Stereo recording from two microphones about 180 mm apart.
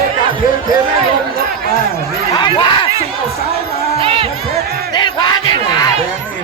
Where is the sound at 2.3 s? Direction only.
25° left (ahead or behind).